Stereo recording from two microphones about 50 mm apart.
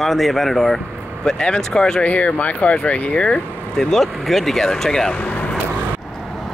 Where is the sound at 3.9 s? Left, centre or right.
Centre.